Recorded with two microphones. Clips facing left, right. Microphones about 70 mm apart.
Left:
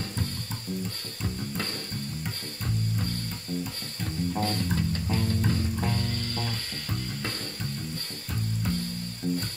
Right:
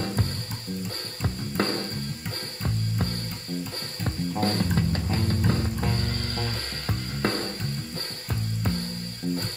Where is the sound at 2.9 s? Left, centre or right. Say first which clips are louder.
Right 2 dB; right.